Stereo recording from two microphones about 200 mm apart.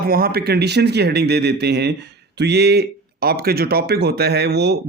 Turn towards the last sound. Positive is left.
turn(degrees=-55)  # may be behind; listen again after turning